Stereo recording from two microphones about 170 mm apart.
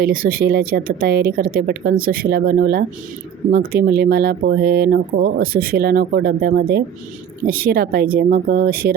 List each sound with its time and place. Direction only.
0.0 s speech: 55° right (ahead or behind)